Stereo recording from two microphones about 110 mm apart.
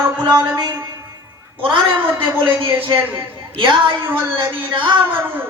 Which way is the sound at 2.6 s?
50° right (ahead or behind).